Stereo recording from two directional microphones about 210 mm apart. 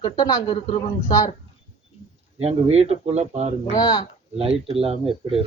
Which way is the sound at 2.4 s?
30° right (ahead or behind).